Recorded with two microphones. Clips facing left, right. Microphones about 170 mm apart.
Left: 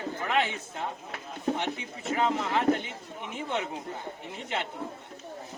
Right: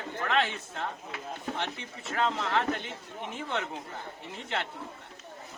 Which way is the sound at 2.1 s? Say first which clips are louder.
Left 2 dB; 15° left (ahead or behind).